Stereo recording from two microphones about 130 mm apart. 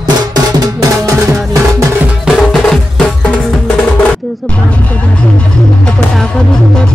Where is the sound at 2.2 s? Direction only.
Centre (ahead or behind).